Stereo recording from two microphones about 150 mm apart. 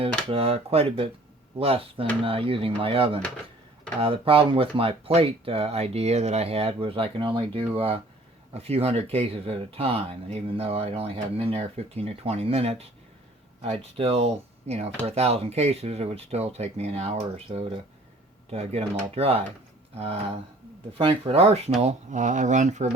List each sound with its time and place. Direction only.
0.0 s speech: 40° right (ahead or behind)
21.0 s speech: 40° right (ahead or behind)